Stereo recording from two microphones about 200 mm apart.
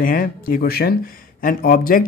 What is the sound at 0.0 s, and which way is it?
Speech, 45° left (ahead or behind).